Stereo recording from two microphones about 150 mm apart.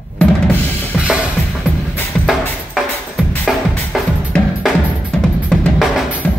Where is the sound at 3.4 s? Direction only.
Centre (ahead or behind).